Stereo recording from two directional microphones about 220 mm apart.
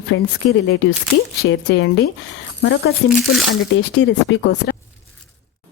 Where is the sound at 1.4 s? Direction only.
50° left (ahead or behind).